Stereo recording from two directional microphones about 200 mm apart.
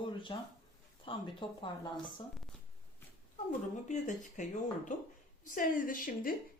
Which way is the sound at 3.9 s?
40° left (ahead or behind).